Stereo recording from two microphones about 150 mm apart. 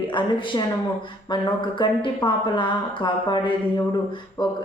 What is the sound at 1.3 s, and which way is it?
A woman's voice, 30° left (ahead or behind).